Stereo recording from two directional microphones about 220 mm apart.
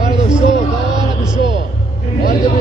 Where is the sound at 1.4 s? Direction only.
20° right (ahead or behind).